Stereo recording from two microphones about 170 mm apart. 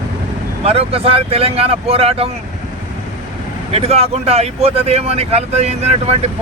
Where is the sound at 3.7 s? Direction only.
35° right (ahead or behind).